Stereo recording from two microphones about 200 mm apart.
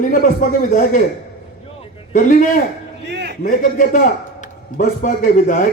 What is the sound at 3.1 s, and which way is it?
Speech, 55° right (ahead or behind).